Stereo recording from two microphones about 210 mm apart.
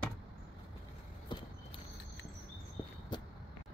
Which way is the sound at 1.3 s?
20° left (ahead or behind).